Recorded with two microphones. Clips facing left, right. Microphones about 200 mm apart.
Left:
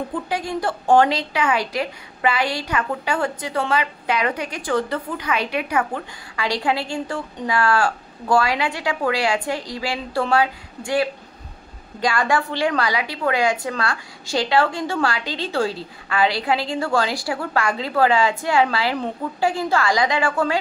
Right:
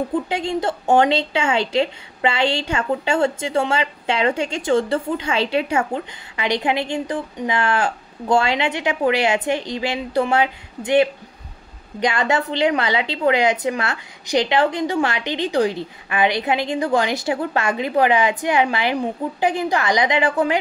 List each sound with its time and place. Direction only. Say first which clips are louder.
0.1 s a woman's voice: right 3 dB; 25° right (ahead or behind)